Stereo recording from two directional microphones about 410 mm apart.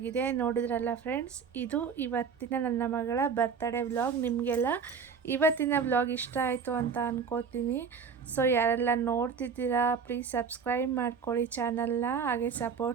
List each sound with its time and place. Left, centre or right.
0.0 s a woman's voice: centre